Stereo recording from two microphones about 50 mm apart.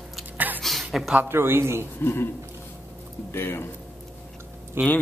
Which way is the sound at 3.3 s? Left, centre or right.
Left.